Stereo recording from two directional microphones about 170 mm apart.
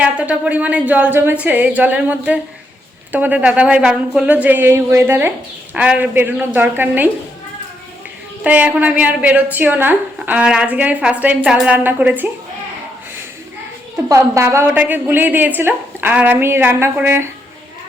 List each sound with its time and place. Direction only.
0.0 s a woman's voice: 5° right (ahead or behind)
8.4 s a woman's voice: 10° right (ahead or behind)
14.1 s a woman's voice: 15° right (ahead or behind)